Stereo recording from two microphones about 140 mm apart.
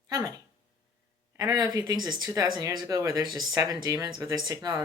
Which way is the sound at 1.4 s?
25° right (ahead or behind).